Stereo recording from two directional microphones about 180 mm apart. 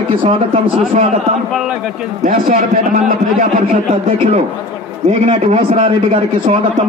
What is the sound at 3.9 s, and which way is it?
A man's voice, 35° right (ahead or behind).